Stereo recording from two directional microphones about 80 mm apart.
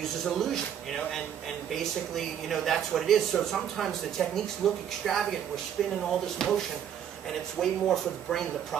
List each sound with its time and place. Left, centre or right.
0.2 s speech: centre